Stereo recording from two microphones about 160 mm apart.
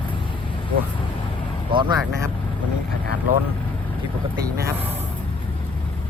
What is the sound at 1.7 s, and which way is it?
Vehicle, 30° right (ahead or behind).